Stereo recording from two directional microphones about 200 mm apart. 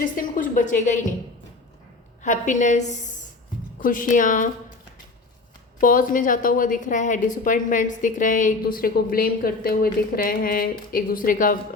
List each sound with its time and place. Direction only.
0.0 s a woman's voice: 40° left (ahead or behind)
2.2 s a woman's voice: 40° left (ahead or behind)
5.8 s a woman's voice: 45° left (ahead or behind)